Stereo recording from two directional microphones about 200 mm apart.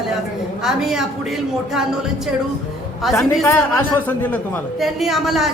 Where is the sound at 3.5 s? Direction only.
10° left (ahead or behind).